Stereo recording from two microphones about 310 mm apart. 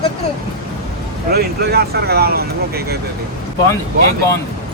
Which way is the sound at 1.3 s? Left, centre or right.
Right.